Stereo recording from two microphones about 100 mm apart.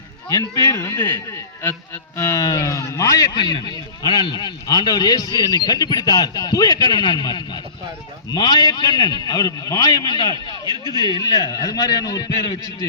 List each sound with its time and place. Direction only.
0.3 s a man's voice: 35° left (ahead or behind)
10.7 s speech: 50° right (ahead or behind)
11.1 s a man's voice: 40° left (ahead or behind)